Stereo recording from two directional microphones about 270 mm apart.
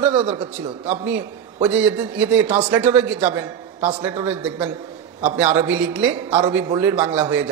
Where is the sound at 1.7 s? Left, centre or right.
Centre.